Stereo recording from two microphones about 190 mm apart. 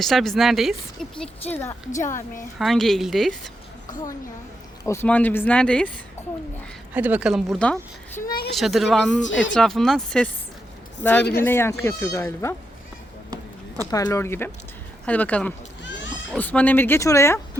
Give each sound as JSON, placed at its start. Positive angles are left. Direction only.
{"t": 0.0, "sound": "speech", "side_deg": 0}
{"t": 2.6, "sound": "speech", "side_deg": 0}
{"t": 3.8, "sound": "a woman's voice", "side_deg": 20}
{"t": 4.9, "sound": "speech", "side_deg": 10}
{"t": 6.9, "sound": "speech", "side_deg": -10}
{"t": 8.2, "sound": "a sound", "side_deg": 50}
{"t": 8.5, "sound": "speech", "side_deg": 0}
{"t": 13.9, "sound": "speech", "side_deg": 15}